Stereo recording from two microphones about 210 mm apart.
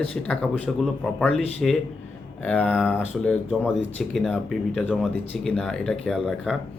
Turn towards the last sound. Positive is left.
turn(degrees=0)  # may be behind; listen again after turning